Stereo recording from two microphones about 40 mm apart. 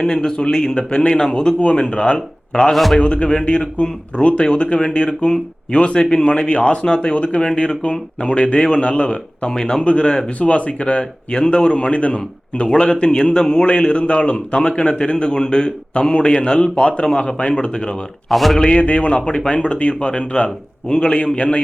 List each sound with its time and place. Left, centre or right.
0.0 s a man's voice: centre
2.7 s a man's voice: centre
3.0 s a man's voice: left
9.8 s a man's voice: left
11.3 s a man's voice: centre
12.6 s a man's voice: left
18.3 s a man's voice: centre
18.8 s a man's voice: left